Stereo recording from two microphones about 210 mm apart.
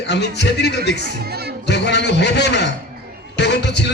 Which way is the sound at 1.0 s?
50° right (ahead or behind).